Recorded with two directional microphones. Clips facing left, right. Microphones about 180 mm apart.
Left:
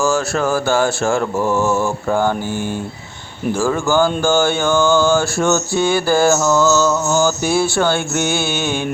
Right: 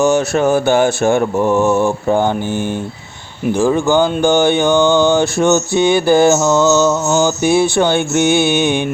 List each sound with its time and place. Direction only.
0.0 s speech: 20° right (ahead or behind)